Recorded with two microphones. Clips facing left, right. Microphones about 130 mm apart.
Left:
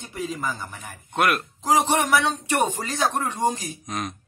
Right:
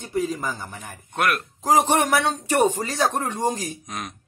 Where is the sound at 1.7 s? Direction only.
45° right (ahead or behind).